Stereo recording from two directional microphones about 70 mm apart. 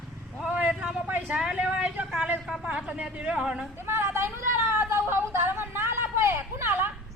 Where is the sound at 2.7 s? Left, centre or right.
Centre.